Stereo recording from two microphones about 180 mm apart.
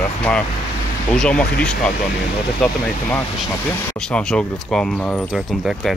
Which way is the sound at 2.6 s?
10° left (ahead or behind).